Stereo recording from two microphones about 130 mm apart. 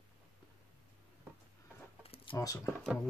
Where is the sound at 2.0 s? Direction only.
50° left (ahead or behind).